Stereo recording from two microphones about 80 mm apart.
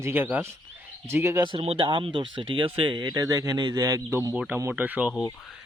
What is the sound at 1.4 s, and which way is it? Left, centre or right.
Speech, right.